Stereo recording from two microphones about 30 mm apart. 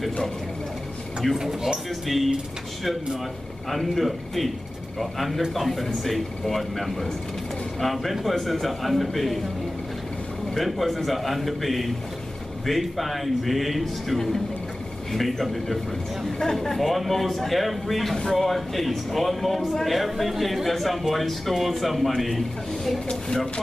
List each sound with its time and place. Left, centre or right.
1.2 s a man's voice: centre
3.7 s a man's voice: centre
10.6 s a man's voice: centre
14.1 s a man's voice: centre
16.3 s a man's voice: centre
23.0 s speech: left